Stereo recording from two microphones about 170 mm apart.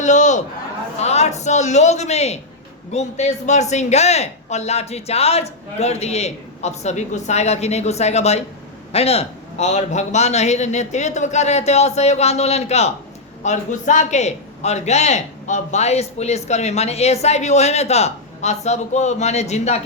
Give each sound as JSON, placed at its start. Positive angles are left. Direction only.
{"t": 0.0, "sound": "a man's voice", "side_deg": 45}